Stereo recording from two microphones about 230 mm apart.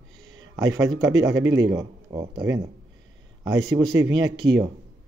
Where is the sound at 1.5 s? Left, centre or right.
Centre.